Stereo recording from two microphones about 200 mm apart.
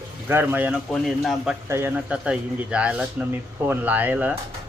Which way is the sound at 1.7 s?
10° right (ahead or behind).